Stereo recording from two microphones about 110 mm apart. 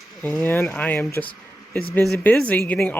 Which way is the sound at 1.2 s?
10° left (ahead or behind).